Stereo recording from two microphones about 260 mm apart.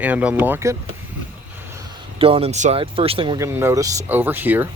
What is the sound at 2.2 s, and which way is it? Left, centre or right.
Speech, right.